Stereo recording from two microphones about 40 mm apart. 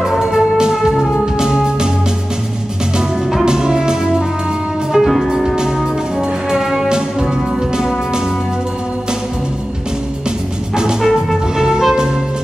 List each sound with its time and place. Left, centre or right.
0.2 s music: centre
3.4 s music: centre
4.9 s music: centre
6.5 s music: centre
11.0 s music: centre
11.5 s music: centre